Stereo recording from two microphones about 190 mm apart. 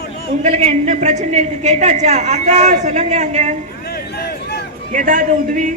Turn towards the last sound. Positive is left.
turn(degrees=-45)  # may be behind; listen again after turning